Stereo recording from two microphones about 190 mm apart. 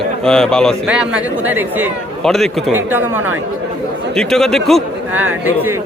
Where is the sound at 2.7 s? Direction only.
10° right (ahead or behind).